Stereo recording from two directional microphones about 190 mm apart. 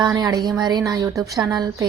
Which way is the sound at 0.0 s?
20° right (ahead or behind).